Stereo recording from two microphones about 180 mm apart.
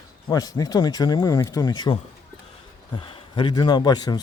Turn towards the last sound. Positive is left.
turn(degrees=20)  # may be behind; listen again after turning